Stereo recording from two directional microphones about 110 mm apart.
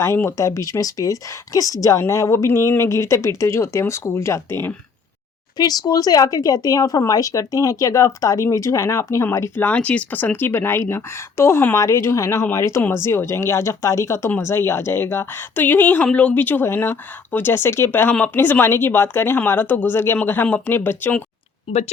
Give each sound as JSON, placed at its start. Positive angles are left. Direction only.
{"t": 0.0, "sound": "speech", "side_deg": 25}
{"t": 5.5, "sound": "speech", "side_deg": 35}
{"t": 21.7, "sound": "speech", "side_deg": 50}